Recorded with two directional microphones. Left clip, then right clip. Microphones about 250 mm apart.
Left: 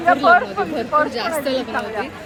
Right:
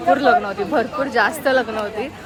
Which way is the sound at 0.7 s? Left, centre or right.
Centre.